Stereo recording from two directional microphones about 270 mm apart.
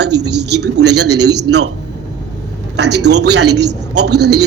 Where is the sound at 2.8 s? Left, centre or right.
Right.